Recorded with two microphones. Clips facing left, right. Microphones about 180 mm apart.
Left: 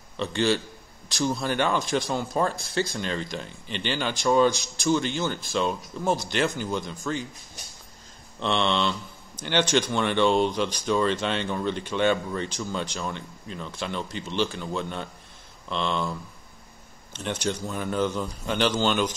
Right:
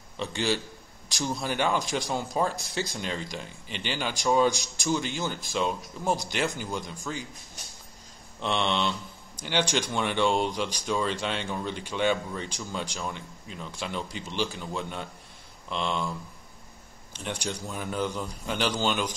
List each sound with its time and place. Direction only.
0.2 s speech: 15° right (ahead or behind)
8.4 s speech: 15° right (ahead or behind)
17.1 s speech: 10° right (ahead or behind)